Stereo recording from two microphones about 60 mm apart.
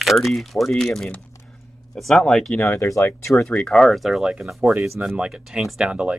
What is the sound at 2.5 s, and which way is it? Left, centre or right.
Speech, left.